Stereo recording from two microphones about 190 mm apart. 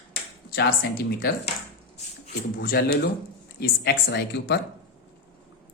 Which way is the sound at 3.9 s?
65° left (ahead or behind).